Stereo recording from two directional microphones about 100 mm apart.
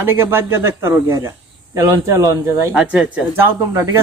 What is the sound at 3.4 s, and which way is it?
Speech, 20° right (ahead or behind).